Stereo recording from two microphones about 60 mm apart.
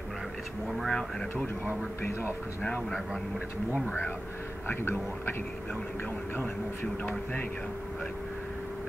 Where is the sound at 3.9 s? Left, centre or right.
Left.